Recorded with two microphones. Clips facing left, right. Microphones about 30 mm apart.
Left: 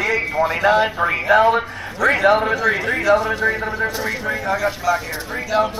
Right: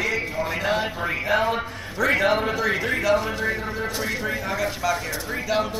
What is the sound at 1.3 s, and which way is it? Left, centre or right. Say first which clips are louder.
A man's voice: left 9 dB; centre.